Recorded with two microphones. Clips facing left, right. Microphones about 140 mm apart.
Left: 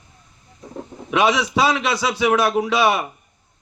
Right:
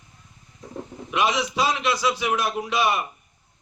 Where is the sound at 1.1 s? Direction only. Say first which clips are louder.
Left 5 dB; 75° left (ahead or behind).